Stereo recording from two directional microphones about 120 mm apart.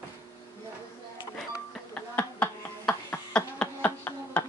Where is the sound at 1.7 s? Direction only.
10° left (ahead or behind).